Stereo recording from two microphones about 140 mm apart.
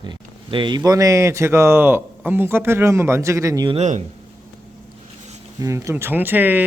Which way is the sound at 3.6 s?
50° right (ahead or behind).